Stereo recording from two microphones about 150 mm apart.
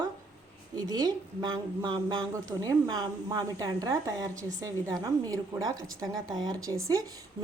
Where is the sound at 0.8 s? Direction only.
25° right (ahead or behind).